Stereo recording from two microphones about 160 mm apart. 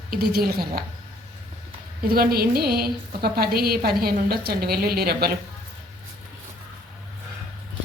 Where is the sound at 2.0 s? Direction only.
70° right (ahead or behind).